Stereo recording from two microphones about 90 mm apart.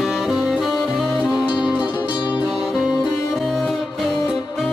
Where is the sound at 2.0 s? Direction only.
55° left (ahead or behind).